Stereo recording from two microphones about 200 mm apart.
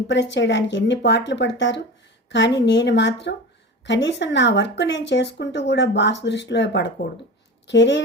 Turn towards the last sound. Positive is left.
turn(degrees=60)  # may be behind; listen again after turning